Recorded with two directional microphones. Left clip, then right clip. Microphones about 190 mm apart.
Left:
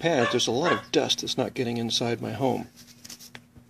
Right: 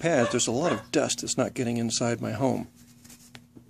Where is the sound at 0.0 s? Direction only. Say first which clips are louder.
Left 1 dB; 5° right (ahead or behind).